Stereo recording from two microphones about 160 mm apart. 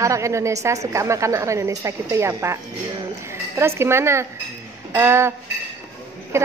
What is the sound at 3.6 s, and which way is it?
A woman's voice, 15° right (ahead or behind).